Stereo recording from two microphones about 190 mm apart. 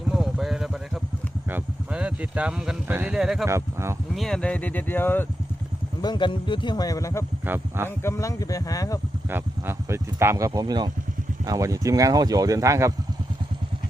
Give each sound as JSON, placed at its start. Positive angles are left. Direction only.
{"t": 0.1, "sound": "vehicle", "side_deg": 0}
{"t": 1.5, "sound": "speech", "side_deg": -10}
{"t": 3.4, "sound": "speech", "side_deg": -15}
{"t": 4.1, "sound": "speech", "side_deg": 0}
{"t": 6.0, "sound": "speech", "side_deg": 25}
{"t": 7.4, "sound": "speech", "side_deg": -10}
{"t": 7.9, "sound": "speech", "side_deg": 15}
{"t": 9.3, "sound": "speech", "side_deg": -15}